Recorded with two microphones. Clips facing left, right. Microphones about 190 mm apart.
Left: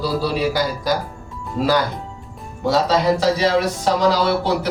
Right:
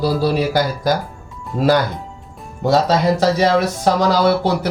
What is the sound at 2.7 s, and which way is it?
Speech, 45° right (ahead or behind).